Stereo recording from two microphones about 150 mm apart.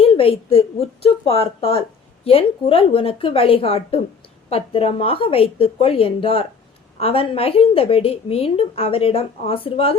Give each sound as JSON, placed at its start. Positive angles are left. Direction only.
{"t": 0.0, "sound": "a woman's voice", "side_deg": 40}